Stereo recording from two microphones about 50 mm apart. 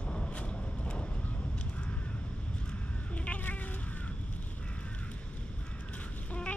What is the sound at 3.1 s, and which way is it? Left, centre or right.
Cat, left.